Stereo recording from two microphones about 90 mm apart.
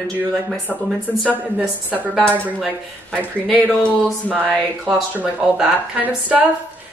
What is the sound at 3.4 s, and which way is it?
Speech, 10° left (ahead or behind).